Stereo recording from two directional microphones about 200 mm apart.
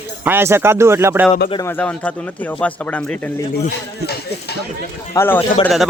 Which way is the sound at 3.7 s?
55° left (ahead or behind).